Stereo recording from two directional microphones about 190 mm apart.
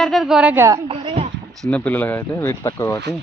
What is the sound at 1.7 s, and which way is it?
Speech, 10° left (ahead or behind).